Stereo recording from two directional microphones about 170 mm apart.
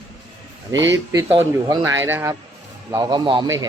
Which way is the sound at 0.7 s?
90° right.